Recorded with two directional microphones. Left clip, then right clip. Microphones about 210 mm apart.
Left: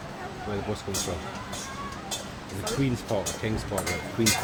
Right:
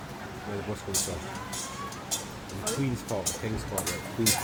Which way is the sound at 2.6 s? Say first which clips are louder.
Left 3 dB; 15° left (ahead or behind).